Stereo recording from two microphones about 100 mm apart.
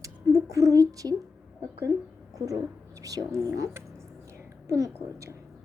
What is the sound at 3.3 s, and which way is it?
A woman's voice, 30° right (ahead or behind).